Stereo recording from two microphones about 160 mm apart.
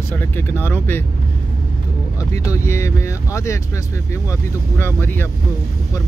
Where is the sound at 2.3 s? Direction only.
20° left (ahead or behind).